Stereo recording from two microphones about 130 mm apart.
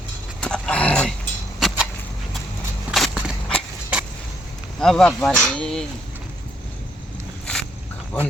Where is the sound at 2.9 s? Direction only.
5° right (ahead or behind).